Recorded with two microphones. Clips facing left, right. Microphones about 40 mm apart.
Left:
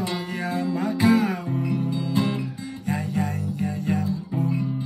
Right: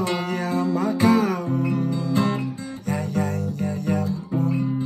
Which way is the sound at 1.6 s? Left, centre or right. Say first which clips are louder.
Right 2 dB; right.